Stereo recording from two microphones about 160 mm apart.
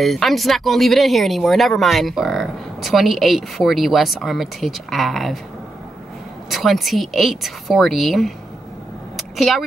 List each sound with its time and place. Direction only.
0.0 s speech: centre (ahead or behind)
6.5 s speech: centre (ahead or behind)
9.1 s a sound: centre (ahead or behind)